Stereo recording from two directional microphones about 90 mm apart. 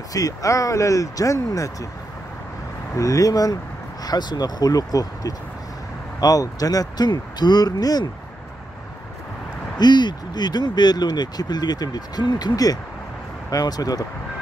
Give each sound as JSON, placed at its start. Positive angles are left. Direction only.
{"t": 0.1, "sound": "speech", "side_deg": 40}
{"t": 3.0, "sound": "speech", "side_deg": 40}
{"t": 9.8, "sound": "speech", "side_deg": 55}